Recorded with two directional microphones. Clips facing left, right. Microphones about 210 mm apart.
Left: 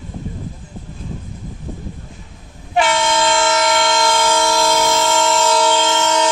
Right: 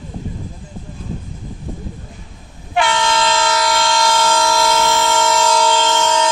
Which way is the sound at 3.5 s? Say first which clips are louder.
Left 1 dB; 20° left (ahead or behind).